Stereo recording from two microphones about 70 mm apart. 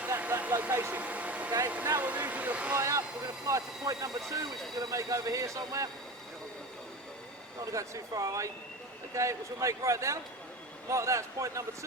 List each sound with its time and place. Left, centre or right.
0.2 s a sound: right
0.9 s vehicle: right
1.6 s a sound: right
2.7 s vehicle: right
3.4 s speech: right
7.6 s speech: right